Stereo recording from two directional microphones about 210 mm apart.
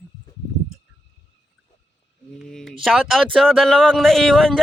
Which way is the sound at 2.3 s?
Centre (ahead or behind).